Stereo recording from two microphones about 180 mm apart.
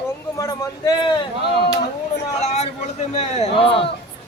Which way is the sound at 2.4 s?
40° left (ahead or behind).